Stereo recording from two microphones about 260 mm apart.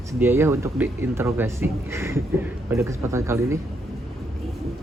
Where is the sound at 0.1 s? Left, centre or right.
Centre.